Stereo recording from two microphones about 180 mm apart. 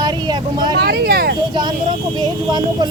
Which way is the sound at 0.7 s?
65° right (ahead or behind).